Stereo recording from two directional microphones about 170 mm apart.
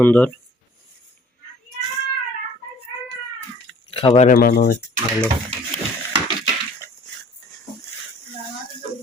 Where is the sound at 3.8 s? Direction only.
35° left (ahead or behind).